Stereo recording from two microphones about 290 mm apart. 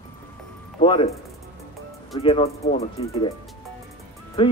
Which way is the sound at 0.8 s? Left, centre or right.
Centre.